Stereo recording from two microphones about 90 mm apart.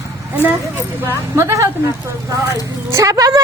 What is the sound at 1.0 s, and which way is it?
Speech, 30° right (ahead or behind).